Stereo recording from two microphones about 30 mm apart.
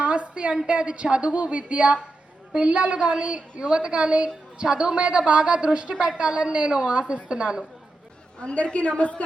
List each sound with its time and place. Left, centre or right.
0.0 s a sound: right
0.7 s a woman's voice: right
8.4 s a woman's voice: left